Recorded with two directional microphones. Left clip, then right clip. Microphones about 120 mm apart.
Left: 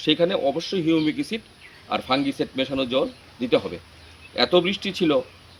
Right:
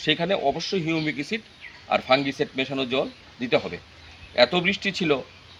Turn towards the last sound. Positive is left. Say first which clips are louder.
# left 2 dB
turn(degrees=-45)  # may be behind; listen again after turning